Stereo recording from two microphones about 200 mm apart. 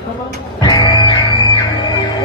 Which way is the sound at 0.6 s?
20° left (ahead or behind).